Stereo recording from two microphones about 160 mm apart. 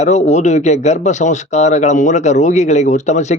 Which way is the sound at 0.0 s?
45° left (ahead or behind).